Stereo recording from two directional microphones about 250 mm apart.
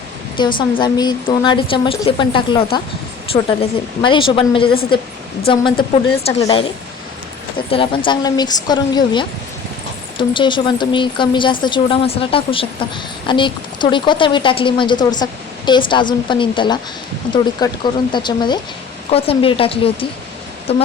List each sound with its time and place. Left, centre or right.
0.3 s speech: centre
7.7 s a woman's voice: centre